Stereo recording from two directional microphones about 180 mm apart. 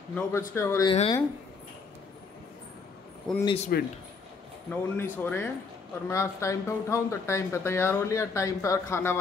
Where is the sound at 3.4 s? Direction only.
35° left (ahead or behind).